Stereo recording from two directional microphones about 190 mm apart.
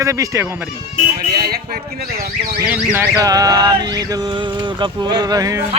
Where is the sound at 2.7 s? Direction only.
10° right (ahead or behind).